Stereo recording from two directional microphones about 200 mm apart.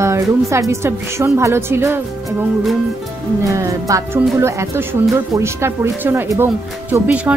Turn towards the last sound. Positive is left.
turn(degrees=-5)  # may be behind; listen again after turning